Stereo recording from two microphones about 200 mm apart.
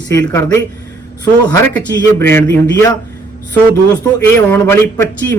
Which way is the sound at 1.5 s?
5° left (ahead or behind).